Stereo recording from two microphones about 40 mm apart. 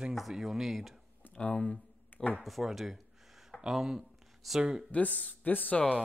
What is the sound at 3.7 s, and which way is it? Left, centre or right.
Speech, centre.